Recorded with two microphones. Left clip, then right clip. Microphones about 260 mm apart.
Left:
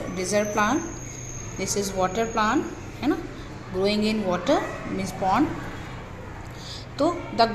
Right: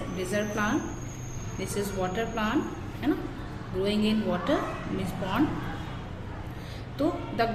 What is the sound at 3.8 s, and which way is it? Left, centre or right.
Speech, left.